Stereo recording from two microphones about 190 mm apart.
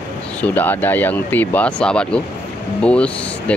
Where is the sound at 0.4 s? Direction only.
10° left (ahead or behind).